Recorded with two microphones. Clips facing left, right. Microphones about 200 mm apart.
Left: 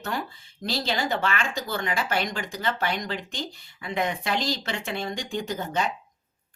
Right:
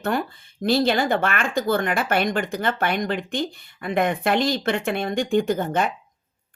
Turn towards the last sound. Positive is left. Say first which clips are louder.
# right 6 dB
turn(degrees=-55)  # may be behind; listen again after turning